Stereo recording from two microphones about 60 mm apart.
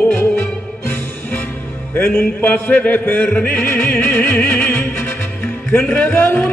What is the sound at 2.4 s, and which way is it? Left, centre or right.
Music, left.